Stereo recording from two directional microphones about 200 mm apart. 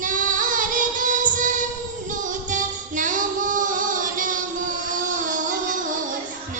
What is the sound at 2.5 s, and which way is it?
Female singing, 40° right (ahead or behind).